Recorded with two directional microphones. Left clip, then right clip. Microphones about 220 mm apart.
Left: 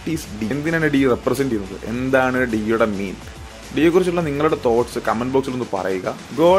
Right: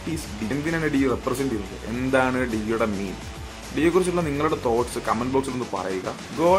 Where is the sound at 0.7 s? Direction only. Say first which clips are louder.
Left 6 dB; 20° left (ahead or behind).